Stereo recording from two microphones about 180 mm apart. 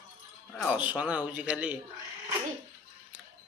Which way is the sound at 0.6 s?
5° right (ahead or behind).